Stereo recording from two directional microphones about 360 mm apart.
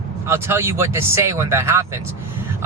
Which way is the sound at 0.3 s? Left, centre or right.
Centre.